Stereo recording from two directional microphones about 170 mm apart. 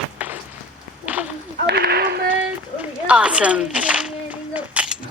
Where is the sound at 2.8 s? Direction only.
5° right (ahead or behind).